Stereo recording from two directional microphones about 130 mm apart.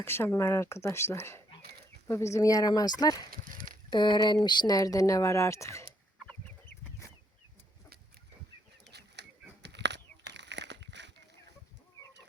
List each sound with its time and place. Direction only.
0.0 s speech: 20° left (ahead or behind)
3.5 s a sound: 90° right
3.8 s speech: 35° left (ahead or behind)